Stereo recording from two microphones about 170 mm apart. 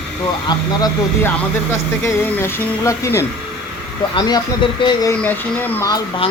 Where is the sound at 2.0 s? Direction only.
15° left (ahead or behind).